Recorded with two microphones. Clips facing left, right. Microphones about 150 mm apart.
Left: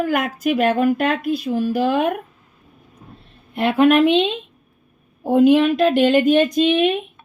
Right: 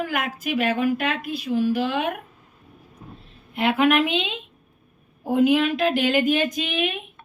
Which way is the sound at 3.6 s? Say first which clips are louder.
Left 5 dB; 40° left (ahead or behind).